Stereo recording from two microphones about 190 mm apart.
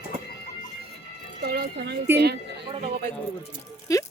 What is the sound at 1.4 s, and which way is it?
Speech, 55° right (ahead or behind).